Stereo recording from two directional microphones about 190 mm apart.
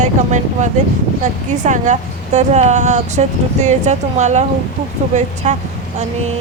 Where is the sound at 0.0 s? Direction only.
40° right (ahead or behind).